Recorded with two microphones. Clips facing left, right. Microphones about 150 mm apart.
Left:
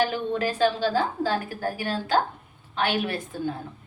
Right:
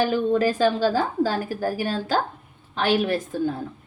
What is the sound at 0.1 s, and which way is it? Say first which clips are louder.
A woman's voice: right 6 dB; 40° right (ahead or behind).